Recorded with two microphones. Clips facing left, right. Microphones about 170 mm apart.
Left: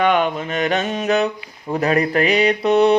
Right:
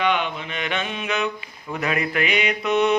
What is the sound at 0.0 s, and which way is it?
Mantra, 45° left (ahead or behind).